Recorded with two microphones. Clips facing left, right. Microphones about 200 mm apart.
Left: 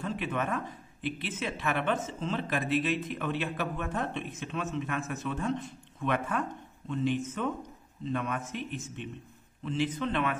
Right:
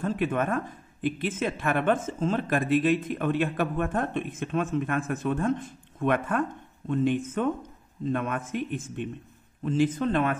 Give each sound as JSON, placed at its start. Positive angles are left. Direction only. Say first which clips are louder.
{"t": 0.0, "sound": "speech", "louder": "right 6 dB", "side_deg": -50}